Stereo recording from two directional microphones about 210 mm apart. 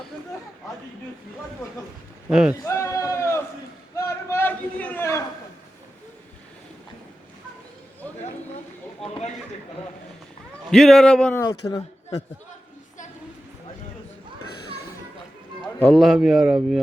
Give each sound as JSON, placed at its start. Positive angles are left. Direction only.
{"t": 2.3, "sound": "speech", "side_deg": -5}
{"t": 2.6, "sound": "a sound", "side_deg": 15}
{"t": 10.7, "sound": "speech", "side_deg": 0}
{"t": 11.4, "sound": "speech", "side_deg": 15}
{"t": 15.8, "sound": "speech", "side_deg": 0}